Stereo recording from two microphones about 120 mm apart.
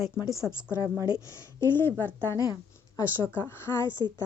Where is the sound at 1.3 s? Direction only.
20° left (ahead or behind).